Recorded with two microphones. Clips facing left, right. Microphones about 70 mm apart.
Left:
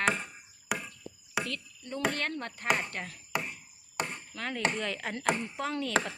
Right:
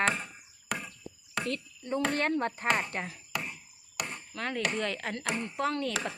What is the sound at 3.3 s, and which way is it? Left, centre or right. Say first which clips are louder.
Chop: left 2 dB; left.